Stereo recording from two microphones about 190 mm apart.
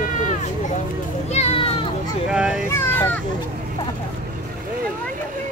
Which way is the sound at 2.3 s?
5° right (ahead or behind).